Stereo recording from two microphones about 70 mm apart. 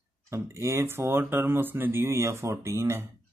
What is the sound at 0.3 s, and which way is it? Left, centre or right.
Speech, right.